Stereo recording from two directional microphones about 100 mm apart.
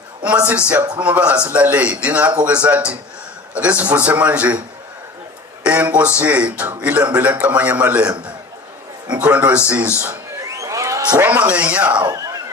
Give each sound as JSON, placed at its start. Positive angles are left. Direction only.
{"t": 0.7, "sound": "speech", "side_deg": -15}
{"t": 5.6, "sound": "speech", "side_deg": -15}
{"t": 9.1, "sound": "speech", "side_deg": -15}
{"t": 10.4, "sound": "a sound", "side_deg": -30}
{"t": 11.2, "sound": "speech", "side_deg": -15}
{"t": 12.0, "sound": "neigh", "side_deg": -35}